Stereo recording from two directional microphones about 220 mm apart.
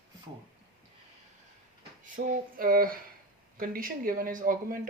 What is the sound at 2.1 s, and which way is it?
Speech, 40° right (ahead or behind).